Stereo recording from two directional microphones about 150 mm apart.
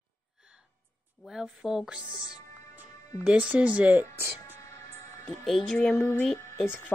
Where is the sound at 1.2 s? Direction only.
Centre (ahead or behind).